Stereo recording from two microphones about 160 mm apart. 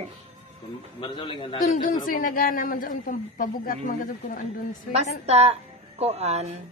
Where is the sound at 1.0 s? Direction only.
30° left (ahead or behind).